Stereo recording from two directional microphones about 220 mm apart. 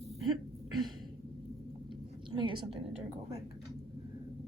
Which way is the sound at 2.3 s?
20° right (ahead or behind).